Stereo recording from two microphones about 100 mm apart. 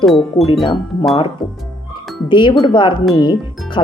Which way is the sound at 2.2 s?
50° left (ahead or behind).